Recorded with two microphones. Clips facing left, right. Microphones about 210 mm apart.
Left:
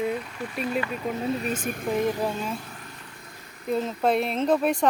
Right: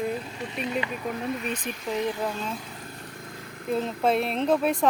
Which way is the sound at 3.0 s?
50° right (ahead or behind).